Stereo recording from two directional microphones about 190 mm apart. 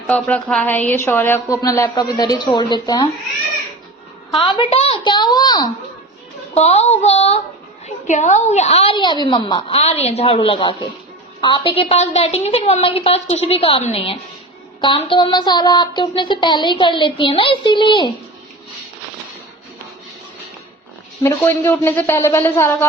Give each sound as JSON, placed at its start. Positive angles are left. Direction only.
{"t": 0.1, "sound": "a woman's voice", "side_deg": 5}
{"t": 4.3, "sound": "a child's voice", "side_deg": 25}
{"t": 6.5, "sound": "a woman's voice", "side_deg": 35}
{"t": 21.2, "sound": "a woman's voice", "side_deg": 10}